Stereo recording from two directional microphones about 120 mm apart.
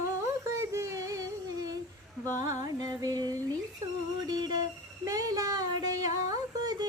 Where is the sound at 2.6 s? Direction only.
30° right (ahead or behind).